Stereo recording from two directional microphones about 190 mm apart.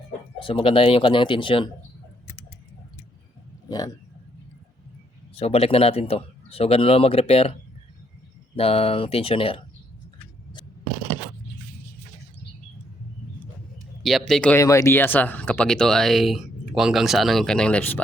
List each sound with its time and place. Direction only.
0.4 s speech: 30° left (ahead or behind)
5.4 s speech: 30° left (ahead or behind)
8.5 s speech: 30° left (ahead or behind)
14.0 s speech: centre (ahead or behind)